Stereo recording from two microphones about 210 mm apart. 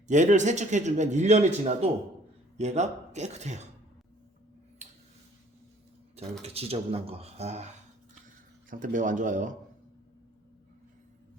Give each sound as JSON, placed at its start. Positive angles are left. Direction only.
{"t": 0.1, "sound": "a man's voice", "side_deg": -35}
{"t": 4.8, "sound": "tick-tock", "side_deg": -30}
{"t": 6.4, "sound": "speech", "side_deg": -30}
{"t": 8.7, "sound": "a man's voice", "side_deg": -40}